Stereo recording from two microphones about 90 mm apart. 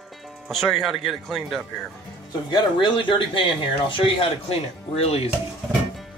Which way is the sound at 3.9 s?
80° left.